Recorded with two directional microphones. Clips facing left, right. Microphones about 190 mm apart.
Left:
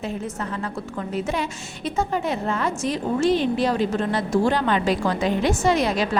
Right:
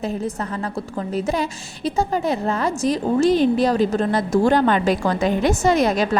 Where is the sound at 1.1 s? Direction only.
35° right (ahead or behind).